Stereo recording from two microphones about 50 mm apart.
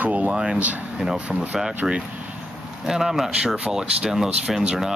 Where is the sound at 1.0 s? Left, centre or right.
Centre.